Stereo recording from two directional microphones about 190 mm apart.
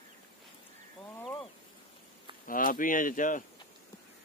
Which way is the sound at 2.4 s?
45° left (ahead or behind).